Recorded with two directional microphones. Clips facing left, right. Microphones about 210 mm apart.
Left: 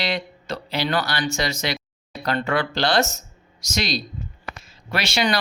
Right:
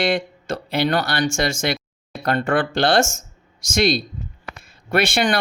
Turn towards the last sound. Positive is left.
turn(degrees=-55)  # may be behind; listen again after turning